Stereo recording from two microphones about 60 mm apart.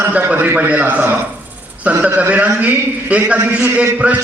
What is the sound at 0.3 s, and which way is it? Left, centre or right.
A man's voice, right.